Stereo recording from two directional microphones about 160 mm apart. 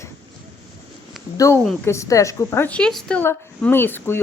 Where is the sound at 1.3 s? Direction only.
20° left (ahead or behind).